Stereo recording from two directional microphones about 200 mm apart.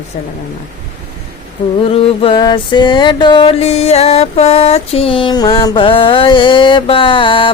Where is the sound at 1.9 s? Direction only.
30° left (ahead or behind).